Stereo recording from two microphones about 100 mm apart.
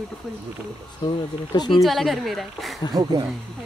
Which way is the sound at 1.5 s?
45° left (ahead or behind).